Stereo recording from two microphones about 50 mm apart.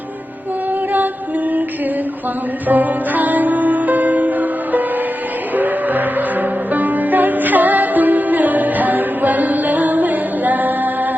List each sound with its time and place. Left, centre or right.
2.6 s music: right